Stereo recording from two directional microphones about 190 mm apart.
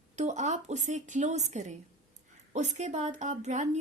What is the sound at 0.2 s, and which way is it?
A woman's voice, 40° right (ahead or behind).